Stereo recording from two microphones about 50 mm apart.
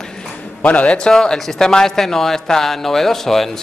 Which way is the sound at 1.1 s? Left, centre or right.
Centre.